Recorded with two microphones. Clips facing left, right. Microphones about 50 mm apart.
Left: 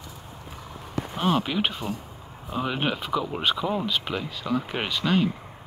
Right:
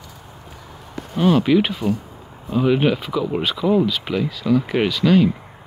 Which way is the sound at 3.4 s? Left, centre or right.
Left.